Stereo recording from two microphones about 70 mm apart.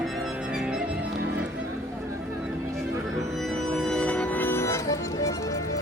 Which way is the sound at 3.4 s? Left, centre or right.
Centre.